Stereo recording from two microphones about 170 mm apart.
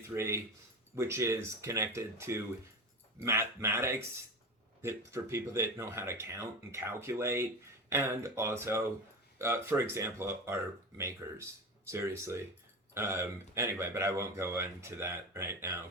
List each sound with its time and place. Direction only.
0.1 s speech: 15° right (ahead or behind)